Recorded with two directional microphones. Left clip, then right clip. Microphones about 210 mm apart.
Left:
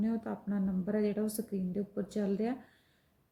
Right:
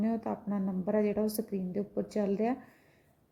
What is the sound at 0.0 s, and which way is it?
A woman's voice, 5° right (ahead or behind).